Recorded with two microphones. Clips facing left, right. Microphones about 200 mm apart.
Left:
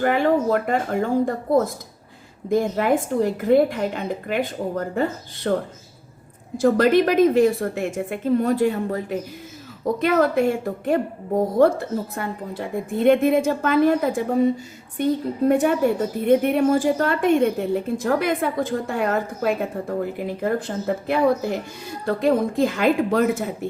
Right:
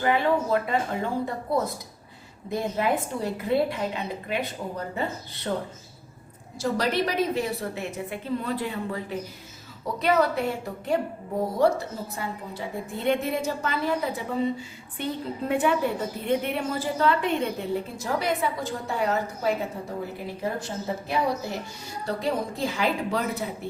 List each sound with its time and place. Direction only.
0.0 s a woman's voice: 50° left (ahead or behind)
6.6 s a woman's voice: 50° left (ahead or behind)